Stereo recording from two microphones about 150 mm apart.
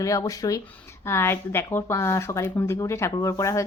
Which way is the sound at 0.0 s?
20° left (ahead or behind).